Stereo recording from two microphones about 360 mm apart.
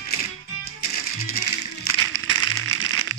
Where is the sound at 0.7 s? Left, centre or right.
Left.